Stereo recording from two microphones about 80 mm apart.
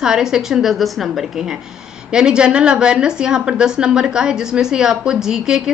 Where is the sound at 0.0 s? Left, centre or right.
Centre.